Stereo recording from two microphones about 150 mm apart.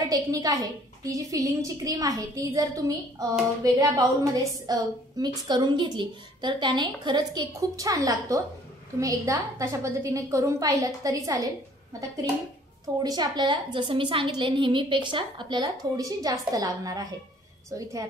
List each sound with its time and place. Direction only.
0.1 s a woman's voice: 25° right (ahead or behind)
13.0 s a woman's voice: 25° right (ahead or behind)